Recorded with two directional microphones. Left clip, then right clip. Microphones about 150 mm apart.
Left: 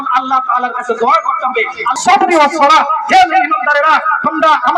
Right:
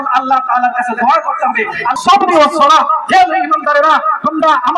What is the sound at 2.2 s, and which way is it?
A man's voice, 25° right (ahead or behind).